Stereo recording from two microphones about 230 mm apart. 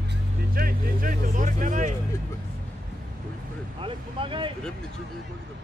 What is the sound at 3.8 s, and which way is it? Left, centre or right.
Speech, right.